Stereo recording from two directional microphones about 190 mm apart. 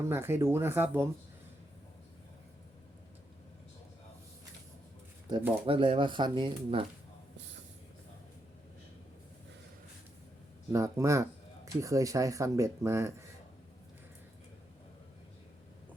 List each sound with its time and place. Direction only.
0.0 s speech: 15° right (ahead or behind)
5.3 s speech: 20° right (ahead or behind)
10.7 s speech: 15° right (ahead or behind)